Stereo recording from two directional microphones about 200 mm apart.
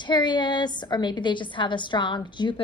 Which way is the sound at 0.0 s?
20° left (ahead or behind).